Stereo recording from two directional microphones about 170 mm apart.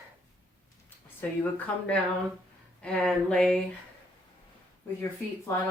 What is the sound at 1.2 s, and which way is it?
Speech, 10° left (ahead or behind).